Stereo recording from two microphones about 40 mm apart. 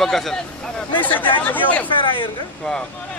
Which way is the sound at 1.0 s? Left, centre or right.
Left.